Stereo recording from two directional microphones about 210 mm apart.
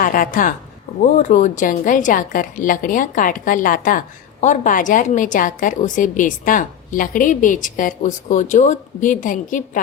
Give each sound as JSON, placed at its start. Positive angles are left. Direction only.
{"t": 0.0, "sound": "a woman's voice", "side_deg": 40}